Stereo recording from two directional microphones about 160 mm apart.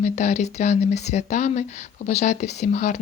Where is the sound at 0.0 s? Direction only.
45° left (ahead or behind).